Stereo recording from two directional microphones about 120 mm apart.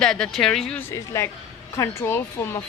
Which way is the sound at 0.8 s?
20° left (ahead or behind).